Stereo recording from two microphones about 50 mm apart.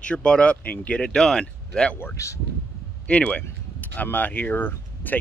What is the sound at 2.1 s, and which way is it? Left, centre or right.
Speech, left.